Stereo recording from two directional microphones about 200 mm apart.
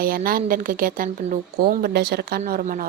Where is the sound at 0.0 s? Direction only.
45° right (ahead or behind).